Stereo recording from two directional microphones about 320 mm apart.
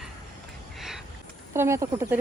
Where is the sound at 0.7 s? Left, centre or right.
Centre.